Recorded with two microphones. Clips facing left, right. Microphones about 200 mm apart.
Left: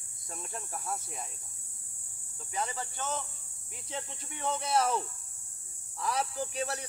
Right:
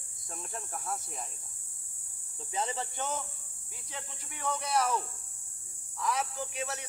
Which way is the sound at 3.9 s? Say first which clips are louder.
Left 5 dB; 25° left (ahead or behind).